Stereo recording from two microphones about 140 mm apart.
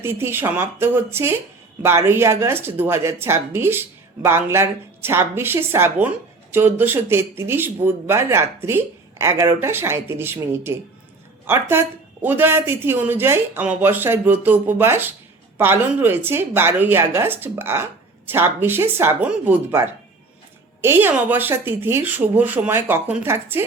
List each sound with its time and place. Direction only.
0.0 s speech: 15° right (ahead or behind)
11.4 s speech: 15° right (ahead or behind)